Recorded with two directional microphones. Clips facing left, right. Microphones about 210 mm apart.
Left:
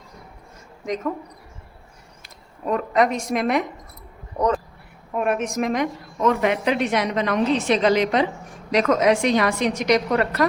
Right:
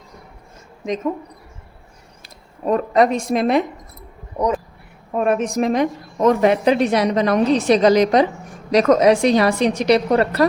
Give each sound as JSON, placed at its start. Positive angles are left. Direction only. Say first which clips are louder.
{"t": 2.2, "sound": "speech", "louder": "right 5 dB", "side_deg": -35}
{"t": 4.4, "sound": "a sound", "louder": "right 1 dB", "side_deg": -10}
{"t": 5.1, "sound": "a woman's voice", "louder": "right 4 dB", "side_deg": -30}